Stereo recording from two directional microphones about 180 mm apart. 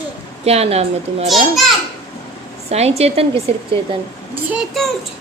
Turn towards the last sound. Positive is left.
turn(degrees=0)  # may be behind; listen again after turning